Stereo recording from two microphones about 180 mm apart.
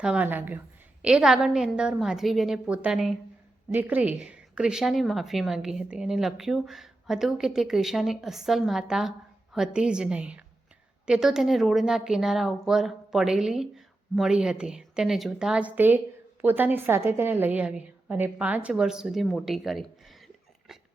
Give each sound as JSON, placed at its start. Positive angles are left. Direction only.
{"t": 0.0, "sound": "a woman's voice", "side_deg": -5}